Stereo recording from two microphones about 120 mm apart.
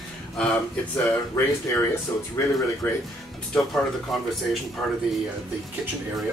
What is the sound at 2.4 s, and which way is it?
Speech, 20° left (ahead or behind).